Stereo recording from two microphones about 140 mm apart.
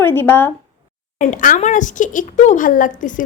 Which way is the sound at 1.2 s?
65° left (ahead or behind).